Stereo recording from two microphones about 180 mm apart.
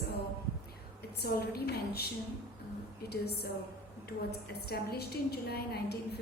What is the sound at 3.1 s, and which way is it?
A woman's voice, 60° left (ahead or behind).